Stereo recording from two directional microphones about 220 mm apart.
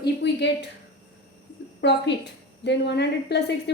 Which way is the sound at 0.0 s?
50° left (ahead or behind).